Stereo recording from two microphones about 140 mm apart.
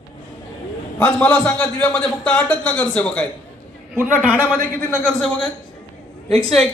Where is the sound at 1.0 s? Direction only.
10° left (ahead or behind).